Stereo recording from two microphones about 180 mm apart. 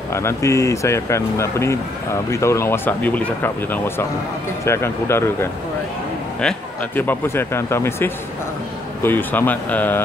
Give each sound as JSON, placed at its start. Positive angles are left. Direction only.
{"t": 0.1, "sound": "speech", "side_deg": 15}